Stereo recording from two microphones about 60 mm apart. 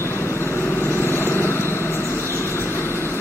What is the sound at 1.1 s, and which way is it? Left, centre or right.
Vehicle, left.